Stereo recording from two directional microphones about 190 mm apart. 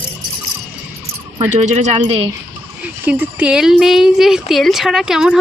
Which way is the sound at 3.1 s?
10° right (ahead or behind).